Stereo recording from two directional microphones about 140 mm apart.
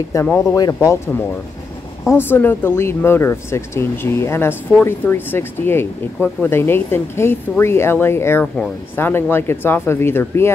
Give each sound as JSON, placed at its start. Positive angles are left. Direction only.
{"t": 0.1, "sound": "speech", "side_deg": 15}